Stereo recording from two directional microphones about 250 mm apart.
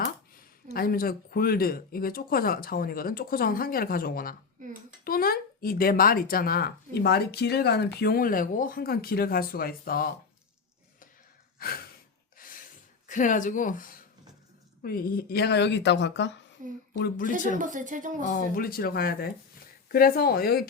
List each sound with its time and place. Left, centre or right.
0.3 s speech: left
11.6 s speech: left
12.4 s a sound: left
13.1 s speech: left
16.6 s speech: right
17.0 s speech: left
17.6 s speech: right
18.3 s speech: left